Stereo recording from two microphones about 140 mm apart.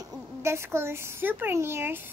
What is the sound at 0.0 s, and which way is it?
A woman's voice, 20° right (ahead or behind).